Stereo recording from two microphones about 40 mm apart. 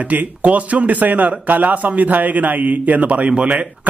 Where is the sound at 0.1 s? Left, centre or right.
Right.